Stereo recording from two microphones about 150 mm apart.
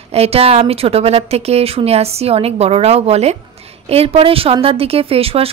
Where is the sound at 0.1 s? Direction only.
45° right (ahead or behind).